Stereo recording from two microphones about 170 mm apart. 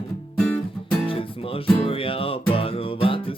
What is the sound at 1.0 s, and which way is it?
Music, 35° left (ahead or behind).